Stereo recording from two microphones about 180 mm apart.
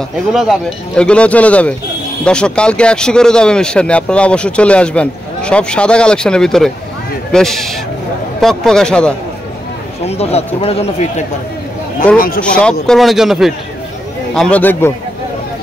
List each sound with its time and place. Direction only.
0.3 s speech: centre (ahead or behind)
10.0 s speech: 35° left (ahead or behind)
12.5 s speech: 5° left (ahead or behind)